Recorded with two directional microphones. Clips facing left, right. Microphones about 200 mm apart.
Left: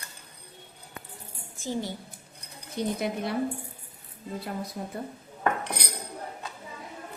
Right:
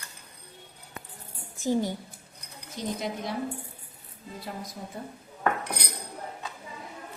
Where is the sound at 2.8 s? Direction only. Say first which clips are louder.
Left 3 dB; 60° left (ahead or behind).